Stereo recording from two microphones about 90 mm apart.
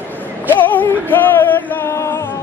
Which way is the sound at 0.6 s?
20° left (ahead or behind).